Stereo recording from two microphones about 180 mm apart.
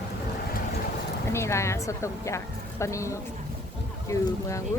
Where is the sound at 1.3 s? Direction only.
15° left (ahead or behind).